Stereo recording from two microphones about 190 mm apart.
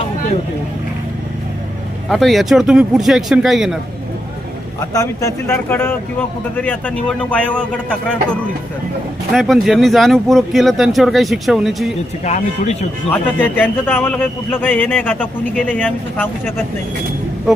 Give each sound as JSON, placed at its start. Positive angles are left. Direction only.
{"t": 2.0, "sound": "speech", "side_deg": 0}
{"t": 4.9, "sound": "a man's voice", "side_deg": 15}
{"t": 12.2, "sound": "speech", "side_deg": 35}
{"t": 13.1, "sound": "a man's voice", "side_deg": 10}